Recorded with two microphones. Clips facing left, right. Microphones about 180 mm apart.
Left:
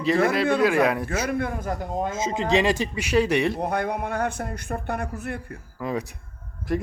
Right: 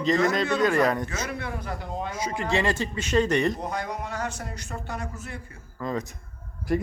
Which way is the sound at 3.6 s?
60° left (ahead or behind).